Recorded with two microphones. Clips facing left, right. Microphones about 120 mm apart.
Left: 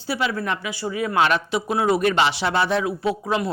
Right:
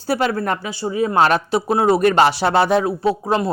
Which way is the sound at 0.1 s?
45° right (ahead or behind).